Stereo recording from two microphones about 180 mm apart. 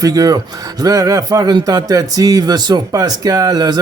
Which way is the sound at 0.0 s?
20° right (ahead or behind).